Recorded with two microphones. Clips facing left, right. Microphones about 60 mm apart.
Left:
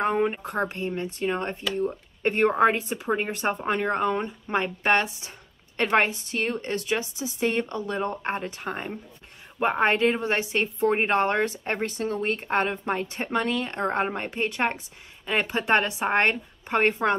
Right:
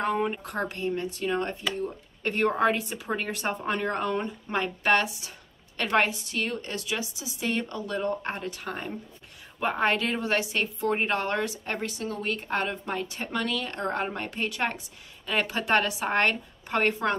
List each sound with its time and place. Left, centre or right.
0.0 s a woman's voice: left